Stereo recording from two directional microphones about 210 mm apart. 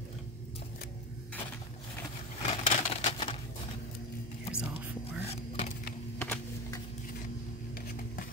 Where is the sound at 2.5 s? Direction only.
35° left (ahead or behind).